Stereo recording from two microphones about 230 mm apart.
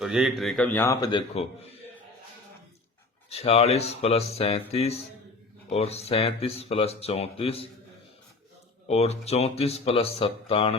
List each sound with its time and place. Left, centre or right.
0.0 s a man's voice: centre; by 1.8 s left
3.2 s speech: left
8.9 s speech: left